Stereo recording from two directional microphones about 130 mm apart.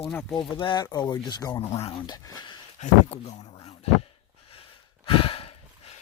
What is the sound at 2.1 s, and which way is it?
Speech, 30° left (ahead or behind).